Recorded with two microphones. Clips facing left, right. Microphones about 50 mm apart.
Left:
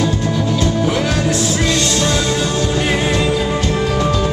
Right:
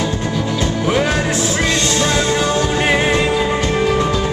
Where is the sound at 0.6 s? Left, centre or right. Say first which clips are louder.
Right 2 dB; right.